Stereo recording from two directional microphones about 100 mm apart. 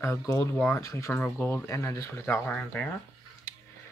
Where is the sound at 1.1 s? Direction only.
20° left (ahead or behind).